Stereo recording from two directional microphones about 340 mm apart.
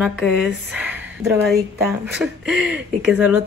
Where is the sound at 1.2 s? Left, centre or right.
Centre.